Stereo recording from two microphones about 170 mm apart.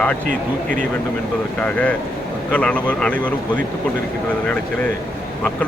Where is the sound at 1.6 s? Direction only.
10° left (ahead or behind).